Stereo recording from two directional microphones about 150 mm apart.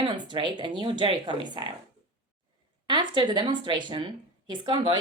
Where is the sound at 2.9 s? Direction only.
30° right (ahead or behind).